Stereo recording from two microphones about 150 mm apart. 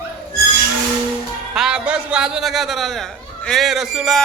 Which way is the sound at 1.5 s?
5° right (ahead or behind).